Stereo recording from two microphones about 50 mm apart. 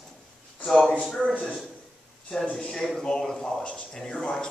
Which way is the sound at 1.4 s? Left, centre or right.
Centre.